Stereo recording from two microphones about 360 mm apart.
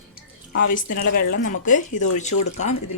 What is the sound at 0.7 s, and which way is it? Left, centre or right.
Speech, left.